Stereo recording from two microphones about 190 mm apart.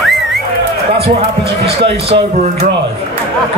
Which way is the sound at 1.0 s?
30° right (ahead or behind).